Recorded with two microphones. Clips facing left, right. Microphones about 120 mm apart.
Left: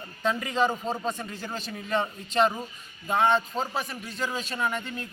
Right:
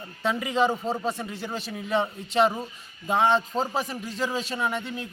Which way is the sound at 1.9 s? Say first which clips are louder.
Right 2 dB; 15° right (ahead or behind).